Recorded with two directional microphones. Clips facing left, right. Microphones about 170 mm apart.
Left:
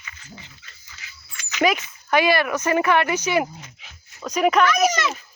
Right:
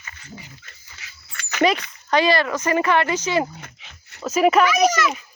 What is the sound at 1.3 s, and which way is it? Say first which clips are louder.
Dog: right 4 dB; 60° right (ahead or behind).